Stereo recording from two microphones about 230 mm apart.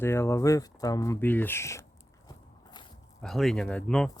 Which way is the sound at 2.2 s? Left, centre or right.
Centre.